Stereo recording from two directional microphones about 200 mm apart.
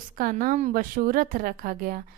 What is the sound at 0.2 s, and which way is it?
Speech, 45° right (ahead or behind).